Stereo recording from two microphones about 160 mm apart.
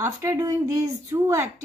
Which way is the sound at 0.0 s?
15° right (ahead or behind).